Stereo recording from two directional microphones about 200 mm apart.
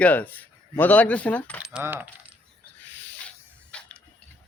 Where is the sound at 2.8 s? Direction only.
10° left (ahead or behind).